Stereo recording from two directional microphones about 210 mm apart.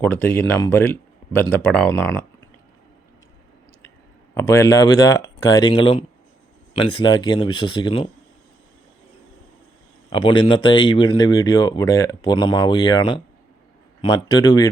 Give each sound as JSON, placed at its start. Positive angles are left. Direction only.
{"t": 0.0, "sound": "speech", "side_deg": 10}
{"t": 4.4, "sound": "speech", "side_deg": 10}
{"t": 10.1, "sound": "speech", "side_deg": 25}